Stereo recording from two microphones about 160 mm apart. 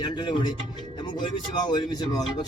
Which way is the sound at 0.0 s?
30° left (ahead or behind).